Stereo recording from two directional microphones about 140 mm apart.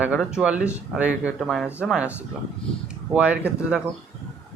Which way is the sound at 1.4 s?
Centre (ahead or behind).